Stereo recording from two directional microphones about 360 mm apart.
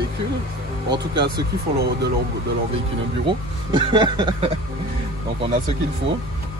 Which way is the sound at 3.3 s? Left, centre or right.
Centre.